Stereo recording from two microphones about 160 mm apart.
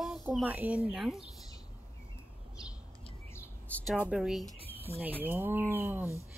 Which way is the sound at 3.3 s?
10° left (ahead or behind).